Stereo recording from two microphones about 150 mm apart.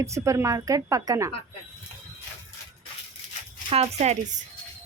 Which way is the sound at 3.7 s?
45° right (ahead or behind).